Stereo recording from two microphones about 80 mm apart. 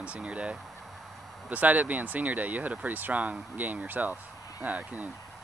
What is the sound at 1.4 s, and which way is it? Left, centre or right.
Speech, centre.